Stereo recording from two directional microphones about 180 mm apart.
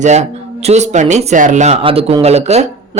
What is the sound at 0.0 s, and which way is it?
Speech, 40° right (ahead or behind).